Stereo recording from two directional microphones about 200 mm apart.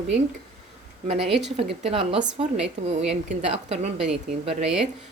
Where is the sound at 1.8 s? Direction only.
30° right (ahead or behind).